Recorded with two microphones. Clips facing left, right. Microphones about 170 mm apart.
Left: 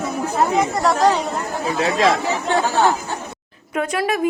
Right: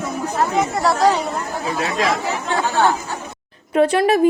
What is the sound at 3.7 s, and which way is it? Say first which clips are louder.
Speech: right 6 dB; 30° right (ahead or behind).